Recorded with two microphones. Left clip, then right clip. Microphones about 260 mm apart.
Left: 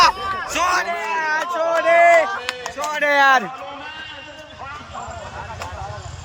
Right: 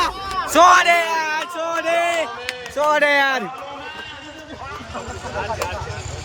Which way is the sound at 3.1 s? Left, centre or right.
Centre.